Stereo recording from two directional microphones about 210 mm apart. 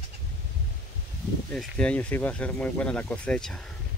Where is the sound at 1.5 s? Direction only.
5° left (ahead or behind).